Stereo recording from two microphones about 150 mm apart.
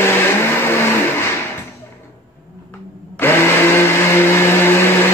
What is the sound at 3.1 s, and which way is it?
Blender, 15° left (ahead or behind).